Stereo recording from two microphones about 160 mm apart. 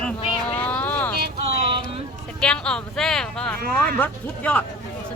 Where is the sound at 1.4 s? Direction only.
40° right (ahead or behind).